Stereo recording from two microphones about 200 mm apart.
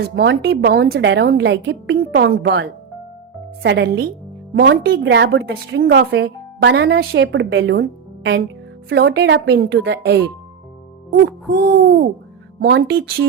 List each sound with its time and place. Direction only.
0.2 s a woman's voice: 60° right (ahead or behind)
11.1 s hoot: 50° right (ahead or behind)